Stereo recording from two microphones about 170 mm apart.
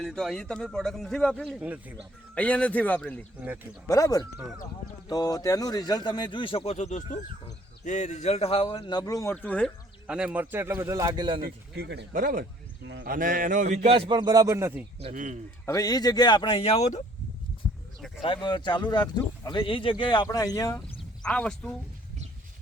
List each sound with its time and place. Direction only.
0.0 s a man's voice: 5° left (ahead or behind)
2.3 s speech: 5° left (ahead or behind)
3.4 s a man's voice: 10° right (ahead or behind)
3.8 s speech: 20° left (ahead or behind)
10.1 s a man's voice: 5° right (ahead or behind); by 11.3 s 25° right (ahead or behind)
11.3 s speech: 65° right (ahead or behind); by 12.0 s 90° right
12.1 s speech: 55° right (ahead or behind)
12.8 s speech: 90° right
13.1 s a man's voice: 55° right (ahead or behind); by 14.8 s 15° right (ahead or behind)
15.1 s speech: 50° right (ahead or behind)
15.6 s speech: 20° left (ahead or behind); by 17.0 s 40° left (ahead or behind)
18.4 s speech: 25° left (ahead or behind)
21.2 s a man's voice: 5° left (ahead or behind)